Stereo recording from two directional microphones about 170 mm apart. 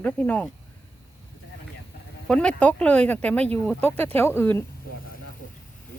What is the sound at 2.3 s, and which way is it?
Speech, 5° left (ahead or behind).